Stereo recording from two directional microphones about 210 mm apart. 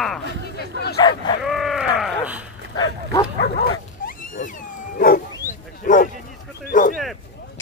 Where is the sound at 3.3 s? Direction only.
45° left (ahead or behind).